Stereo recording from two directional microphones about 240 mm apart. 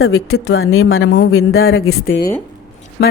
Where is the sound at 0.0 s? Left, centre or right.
Left.